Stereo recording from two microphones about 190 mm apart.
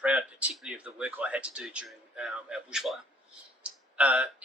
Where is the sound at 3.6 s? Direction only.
5° right (ahead or behind).